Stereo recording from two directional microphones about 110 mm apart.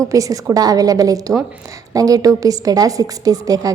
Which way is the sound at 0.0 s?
30° right (ahead or behind).